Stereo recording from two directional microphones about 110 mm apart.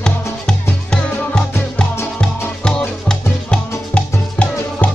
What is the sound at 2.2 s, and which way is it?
Music, 10° left (ahead or behind).